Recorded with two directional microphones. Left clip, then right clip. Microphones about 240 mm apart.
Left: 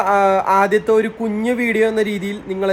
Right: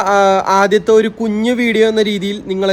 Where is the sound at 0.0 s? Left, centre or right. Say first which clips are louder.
Right 3 dB; centre.